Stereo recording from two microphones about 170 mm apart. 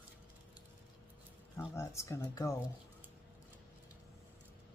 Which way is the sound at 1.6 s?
15° left (ahead or behind).